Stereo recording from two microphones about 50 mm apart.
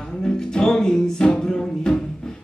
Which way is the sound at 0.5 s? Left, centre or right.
Centre.